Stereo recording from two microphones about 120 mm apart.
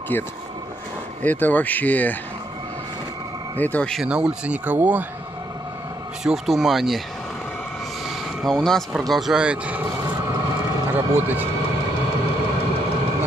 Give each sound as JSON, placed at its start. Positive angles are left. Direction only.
{"t": 0.1, "sound": "speech", "side_deg": 15}
{"t": 3.5, "sound": "speech", "side_deg": 15}
{"t": 4.0, "sound": "speech", "side_deg": -5}
{"t": 6.2, "sound": "speech", "side_deg": 0}
{"t": 8.5, "sound": "speech", "side_deg": 5}
{"t": 10.9, "sound": "a man's voice", "side_deg": -15}